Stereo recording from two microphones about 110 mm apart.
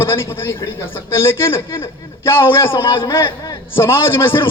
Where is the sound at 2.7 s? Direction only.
50° left (ahead or behind).